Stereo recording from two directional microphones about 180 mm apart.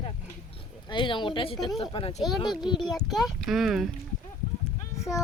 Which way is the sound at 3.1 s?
Centre (ahead or behind).